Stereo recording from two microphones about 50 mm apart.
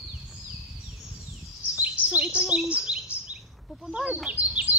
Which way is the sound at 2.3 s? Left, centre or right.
Centre.